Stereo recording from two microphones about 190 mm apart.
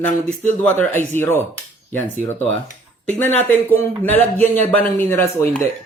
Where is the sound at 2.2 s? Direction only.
35° left (ahead or behind).